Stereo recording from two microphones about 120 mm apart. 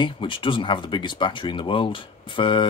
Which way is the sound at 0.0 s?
45° left (ahead or behind).